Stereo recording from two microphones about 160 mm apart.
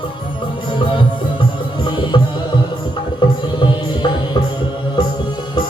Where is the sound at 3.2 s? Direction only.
30° left (ahead or behind).